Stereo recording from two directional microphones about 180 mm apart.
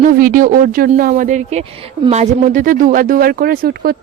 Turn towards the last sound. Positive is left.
turn(degrees=-55)  # may be behind; listen again after turning